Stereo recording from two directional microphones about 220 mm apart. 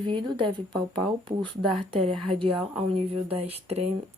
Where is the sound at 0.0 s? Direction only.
20° right (ahead or behind).